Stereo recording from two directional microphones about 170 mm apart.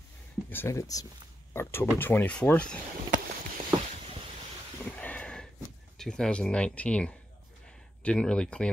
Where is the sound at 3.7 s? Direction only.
25° right (ahead or behind).